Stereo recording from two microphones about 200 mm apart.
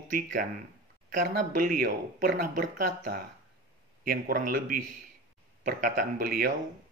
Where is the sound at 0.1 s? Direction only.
40° right (ahead or behind).